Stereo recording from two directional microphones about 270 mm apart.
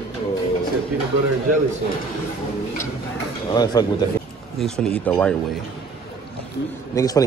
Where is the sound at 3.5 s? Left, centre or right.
Centre.